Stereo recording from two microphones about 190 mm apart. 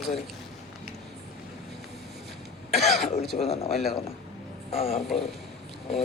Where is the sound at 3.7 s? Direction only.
Centre (ahead or behind).